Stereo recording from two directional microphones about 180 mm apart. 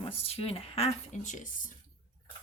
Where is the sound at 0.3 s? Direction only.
30° left (ahead or behind).